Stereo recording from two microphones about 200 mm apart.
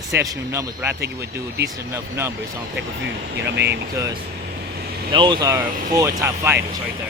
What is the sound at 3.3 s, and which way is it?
Speech, 55° right (ahead or behind).